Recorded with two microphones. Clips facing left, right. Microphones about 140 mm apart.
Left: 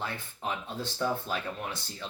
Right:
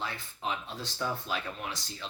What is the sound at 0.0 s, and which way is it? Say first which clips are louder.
Speech: left 1 dB; 55° left (ahead or behind).